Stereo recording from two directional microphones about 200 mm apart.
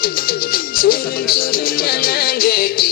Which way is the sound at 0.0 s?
45° left (ahead or behind).